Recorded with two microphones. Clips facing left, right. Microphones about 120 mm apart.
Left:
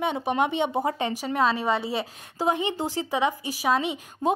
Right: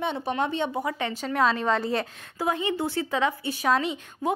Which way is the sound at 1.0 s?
5° left (ahead or behind).